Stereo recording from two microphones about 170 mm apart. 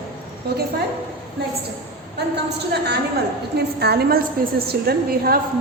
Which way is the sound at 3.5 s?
70° right (ahead or behind).